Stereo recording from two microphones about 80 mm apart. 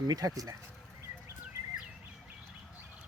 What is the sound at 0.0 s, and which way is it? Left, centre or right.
Speech, right.